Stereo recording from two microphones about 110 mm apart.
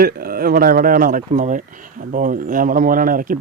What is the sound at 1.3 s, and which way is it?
Speech, 90° right.